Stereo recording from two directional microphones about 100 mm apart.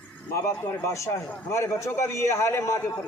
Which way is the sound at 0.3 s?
30° left (ahead or behind).